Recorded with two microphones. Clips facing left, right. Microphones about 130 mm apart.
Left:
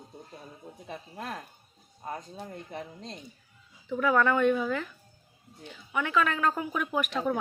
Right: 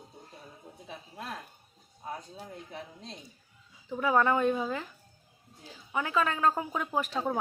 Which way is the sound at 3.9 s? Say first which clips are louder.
Left 1 dB; 25° right (ahead or behind).